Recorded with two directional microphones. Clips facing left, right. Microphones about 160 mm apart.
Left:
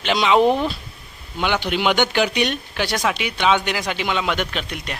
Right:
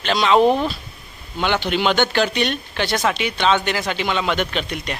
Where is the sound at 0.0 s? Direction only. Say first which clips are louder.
Right 1 dB; 15° left (ahead or behind).